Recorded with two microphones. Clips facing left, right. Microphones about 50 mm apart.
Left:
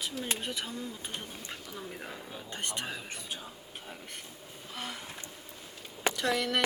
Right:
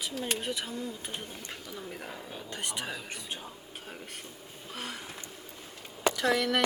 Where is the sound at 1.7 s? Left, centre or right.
Centre.